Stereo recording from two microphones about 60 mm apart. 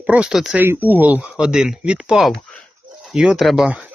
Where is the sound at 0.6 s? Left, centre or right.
Right.